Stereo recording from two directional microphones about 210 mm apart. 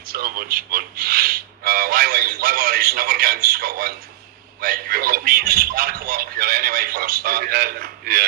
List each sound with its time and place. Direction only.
0.0 s speech: 45° right (ahead or behind)